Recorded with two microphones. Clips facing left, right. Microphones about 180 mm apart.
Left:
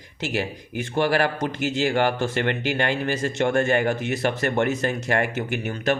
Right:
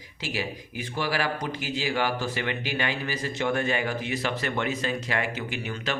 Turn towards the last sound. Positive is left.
turn(degrees=50)  # may be behind; listen again after turning